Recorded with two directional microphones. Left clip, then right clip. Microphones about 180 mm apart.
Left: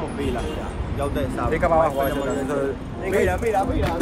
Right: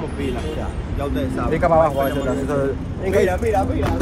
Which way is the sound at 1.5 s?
Centre (ahead or behind).